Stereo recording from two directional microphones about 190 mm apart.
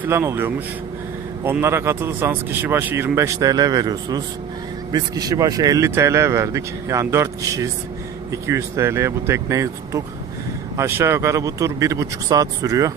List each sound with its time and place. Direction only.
0.0 s speech: 15° right (ahead or behind)